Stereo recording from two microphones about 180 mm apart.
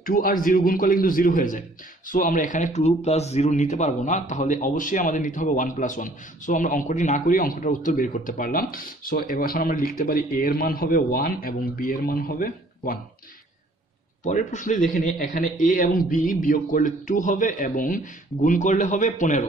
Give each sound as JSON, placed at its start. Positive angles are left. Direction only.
{"t": 0.0, "sound": "speech", "side_deg": 50}
{"t": 14.2, "sound": "speech", "side_deg": 45}